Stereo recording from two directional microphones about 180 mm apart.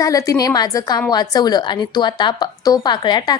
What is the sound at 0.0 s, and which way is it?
A woman's voice, 20° left (ahead or behind).